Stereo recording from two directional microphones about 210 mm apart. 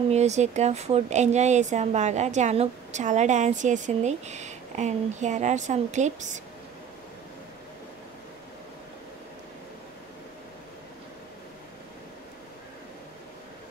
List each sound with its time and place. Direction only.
0.1 s a woman's voice: 30° right (ahead or behind)